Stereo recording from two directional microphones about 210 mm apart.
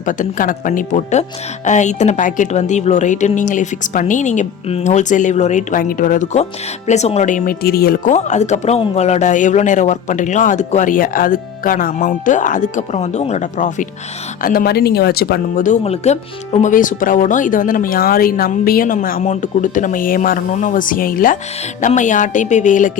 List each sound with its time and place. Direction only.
0.0 s speech: 40° left (ahead or behind)
8.1 s speech: 35° left (ahead or behind)